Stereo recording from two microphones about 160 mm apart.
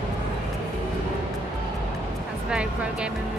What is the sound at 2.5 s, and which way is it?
Speech, 5° right (ahead or behind).